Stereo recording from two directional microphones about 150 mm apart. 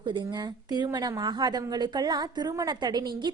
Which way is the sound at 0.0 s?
30° right (ahead or behind).